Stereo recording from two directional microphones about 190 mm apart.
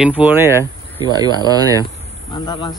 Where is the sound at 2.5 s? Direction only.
20° left (ahead or behind).